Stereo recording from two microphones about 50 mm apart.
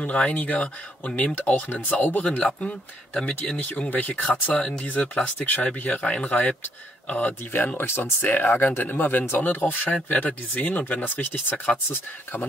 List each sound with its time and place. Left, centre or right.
0.0 s speech: left
2.3 s speech: left
3.5 s speech: left
4.6 s speech: centre
4.8 s speech: left
7.5 s speech: left